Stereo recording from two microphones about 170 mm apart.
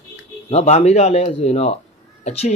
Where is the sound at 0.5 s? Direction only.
40° left (ahead or behind).